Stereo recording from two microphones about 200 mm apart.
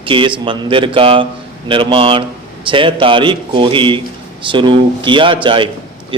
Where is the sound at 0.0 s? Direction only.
25° right (ahead or behind).